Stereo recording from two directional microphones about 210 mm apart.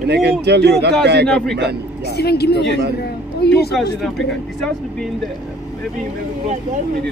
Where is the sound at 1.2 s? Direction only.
5° left (ahead or behind).